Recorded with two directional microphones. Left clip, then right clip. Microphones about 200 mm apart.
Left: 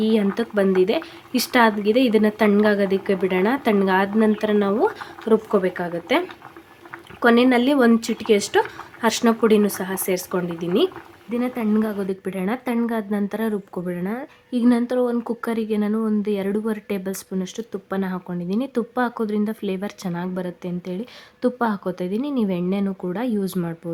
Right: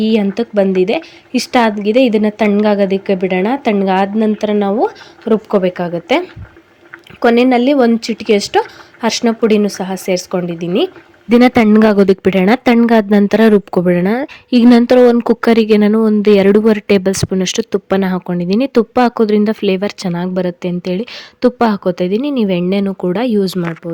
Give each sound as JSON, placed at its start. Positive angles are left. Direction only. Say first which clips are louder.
{"t": 0.0, "sound": "a woman's voice", "louder": "right 6 dB", "side_deg": -25}
{"t": 11.3, "sound": "a woman's voice", "louder": "right 15 dB", "side_deg": -45}